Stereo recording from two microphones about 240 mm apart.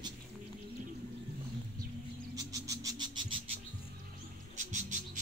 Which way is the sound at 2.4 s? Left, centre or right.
Centre.